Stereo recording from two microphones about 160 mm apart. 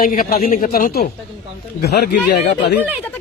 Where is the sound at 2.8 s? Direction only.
10° right (ahead or behind).